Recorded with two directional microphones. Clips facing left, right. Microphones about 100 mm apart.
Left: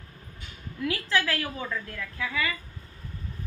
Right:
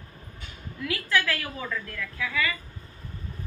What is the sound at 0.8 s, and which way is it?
A woman's voice, 30° left (ahead or behind).